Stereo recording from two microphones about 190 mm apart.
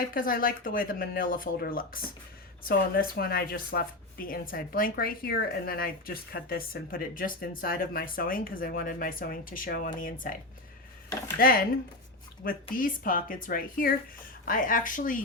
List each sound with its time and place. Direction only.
0.1 s a woman's voice: 50° left (ahead or behind)
11.3 s a woman's voice: 50° left (ahead or behind)
12.7 s a woman's voice: 45° left (ahead or behind)